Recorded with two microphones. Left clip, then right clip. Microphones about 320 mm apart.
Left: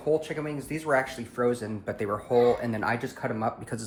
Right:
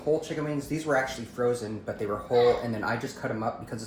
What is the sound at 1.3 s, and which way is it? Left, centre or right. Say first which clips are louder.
Speech: left 1 dB; left.